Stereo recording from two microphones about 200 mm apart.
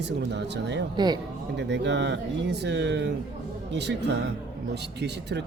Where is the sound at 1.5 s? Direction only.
60° right (ahead or behind).